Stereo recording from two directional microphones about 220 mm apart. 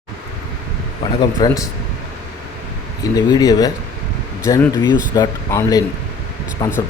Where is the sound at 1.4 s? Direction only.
15° left (ahead or behind).